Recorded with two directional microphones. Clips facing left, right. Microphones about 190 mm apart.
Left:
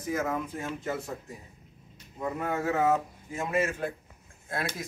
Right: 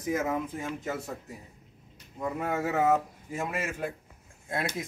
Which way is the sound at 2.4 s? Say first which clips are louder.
Even; 10° right (ahead or behind).